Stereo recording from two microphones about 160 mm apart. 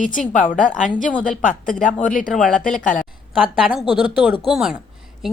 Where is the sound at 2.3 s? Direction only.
Centre (ahead or behind).